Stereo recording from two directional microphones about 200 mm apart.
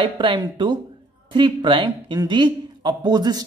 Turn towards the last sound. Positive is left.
turn(degrees=-20)  # may be behind; listen again after turning